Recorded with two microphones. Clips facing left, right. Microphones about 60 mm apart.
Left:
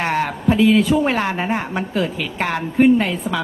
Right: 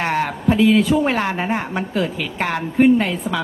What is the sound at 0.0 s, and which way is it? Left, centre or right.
Speech, left.